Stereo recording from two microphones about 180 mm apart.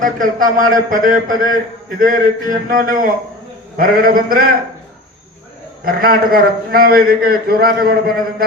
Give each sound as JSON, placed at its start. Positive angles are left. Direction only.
{"t": 0.0, "sound": "a man's voice", "side_deg": -50}
{"t": 5.8, "sound": "a man's voice", "side_deg": -55}